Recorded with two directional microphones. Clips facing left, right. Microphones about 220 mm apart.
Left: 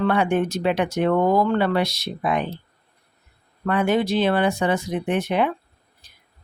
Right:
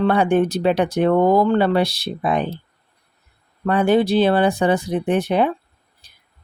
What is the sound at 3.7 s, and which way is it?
Speech, 35° right (ahead or behind).